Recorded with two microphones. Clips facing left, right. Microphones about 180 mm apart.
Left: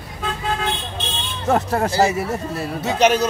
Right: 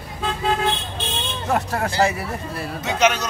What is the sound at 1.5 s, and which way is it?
Speech, 30° left (ahead or behind).